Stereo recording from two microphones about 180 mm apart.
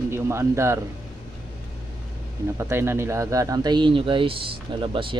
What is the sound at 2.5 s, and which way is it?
Speech, 15° right (ahead or behind).